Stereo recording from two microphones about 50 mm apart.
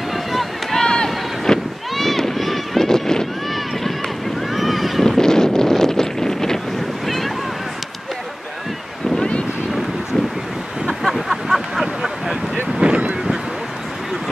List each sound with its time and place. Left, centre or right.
0.1 s boat: centre
0.9 s run: centre
4.4 s boat: centre
5.1 s wind noise: centre
7.1 s boat: centre
9.1 s boat: centre
10.9 s vehicle: centre
12.8 s boat: right